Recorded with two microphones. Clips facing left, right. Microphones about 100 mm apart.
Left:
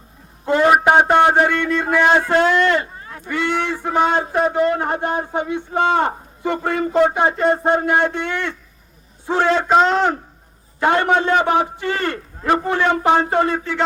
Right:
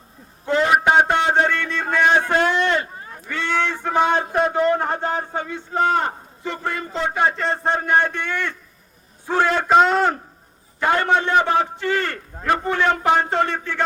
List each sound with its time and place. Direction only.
0.4 s a sound: 15° left (ahead or behind)
0.7 s a man's voice: 20° left (ahead or behind)
2.5 s speech: 20° right (ahead or behind)
3.2 s a man's voice: 15° left (ahead or behind)
9.6 s a man's voice: centre (ahead or behind)
10.8 s a man's voice: 20° left (ahead or behind)